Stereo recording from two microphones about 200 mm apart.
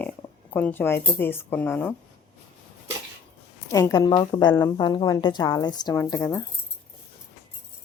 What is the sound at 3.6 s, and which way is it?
A woman's voice, 15° left (ahead or behind).